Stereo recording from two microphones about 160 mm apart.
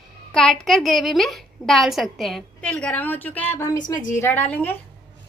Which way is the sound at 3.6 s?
25° left (ahead or behind).